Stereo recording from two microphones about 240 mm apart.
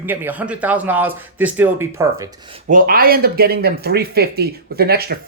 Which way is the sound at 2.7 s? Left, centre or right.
Right.